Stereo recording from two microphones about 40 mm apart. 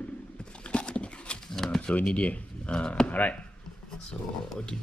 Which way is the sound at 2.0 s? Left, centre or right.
Left.